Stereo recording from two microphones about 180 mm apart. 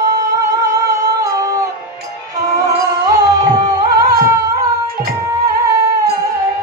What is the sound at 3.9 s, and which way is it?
Music, 20° right (ahead or behind).